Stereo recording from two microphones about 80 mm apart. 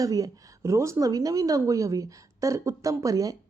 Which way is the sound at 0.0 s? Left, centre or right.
Right.